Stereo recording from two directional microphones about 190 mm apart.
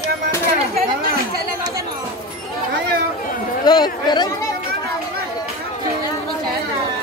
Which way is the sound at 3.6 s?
20° left (ahead or behind).